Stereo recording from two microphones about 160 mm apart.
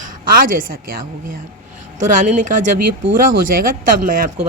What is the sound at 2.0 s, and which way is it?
A woman's voice, 55° right (ahead or behind).